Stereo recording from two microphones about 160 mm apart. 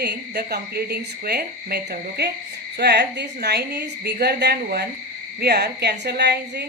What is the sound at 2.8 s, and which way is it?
A woman's voice, 90° right.